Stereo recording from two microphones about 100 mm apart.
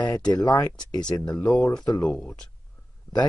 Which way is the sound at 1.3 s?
15° left (ahead or behind).